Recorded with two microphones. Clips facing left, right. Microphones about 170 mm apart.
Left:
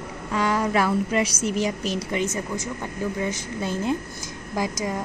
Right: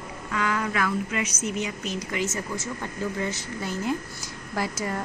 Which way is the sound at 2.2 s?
15° left (ahead or behind).